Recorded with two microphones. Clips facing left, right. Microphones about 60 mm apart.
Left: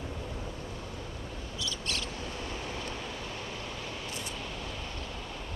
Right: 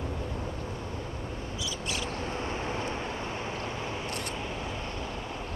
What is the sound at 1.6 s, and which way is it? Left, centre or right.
Owl, centre.